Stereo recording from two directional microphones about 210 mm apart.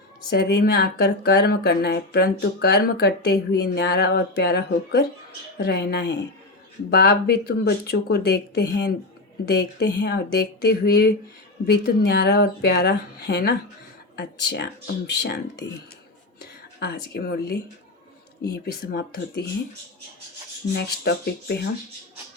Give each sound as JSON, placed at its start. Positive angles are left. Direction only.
{"t": 0.3, "sound": "speech", "side_deg": 50}
{"t": 16.8, "sound": "speech", "side_deg": 50}
{"t": 20.7, "sound": "speech", "side_deg": 50}